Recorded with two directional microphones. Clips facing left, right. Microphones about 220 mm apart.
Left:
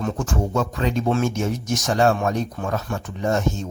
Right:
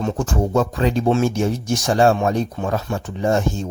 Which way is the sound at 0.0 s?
35° right (ahead or behind).